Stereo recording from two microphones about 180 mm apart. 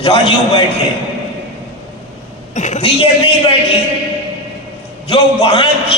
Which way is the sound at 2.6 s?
40° left (ahead or behind).